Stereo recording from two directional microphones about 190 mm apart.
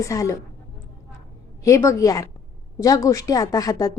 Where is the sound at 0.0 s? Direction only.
15° left (ahead or behind).